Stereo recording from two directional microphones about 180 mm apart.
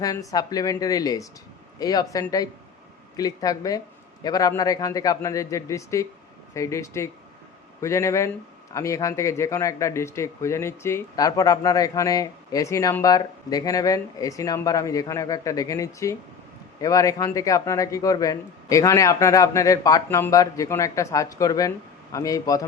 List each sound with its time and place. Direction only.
0.0 s a man's voice: 20° left (ahead or behind)